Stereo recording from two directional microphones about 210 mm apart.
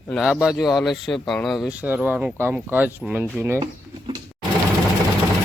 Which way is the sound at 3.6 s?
20° right (ahead or behind).